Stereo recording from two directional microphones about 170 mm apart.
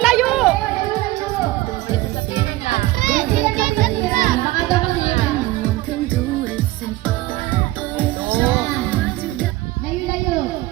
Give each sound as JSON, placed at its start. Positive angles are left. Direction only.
{"t": 0.0, "sound": "chatter", "side_deg": 0}
{"t": 2.3, "sound": "music", "side_deg": 40}
{"t": 3.0, "sound": "children playing", "side_deg": -50}
{"t": 8.0, "sound": "music", "side_deg": -10}